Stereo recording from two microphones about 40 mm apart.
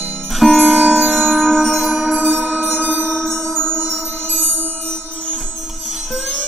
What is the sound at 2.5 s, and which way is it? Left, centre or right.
Music, centre.